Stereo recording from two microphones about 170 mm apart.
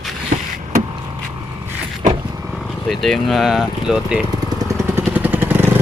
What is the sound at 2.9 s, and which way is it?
Speech, centre (ahead or behind).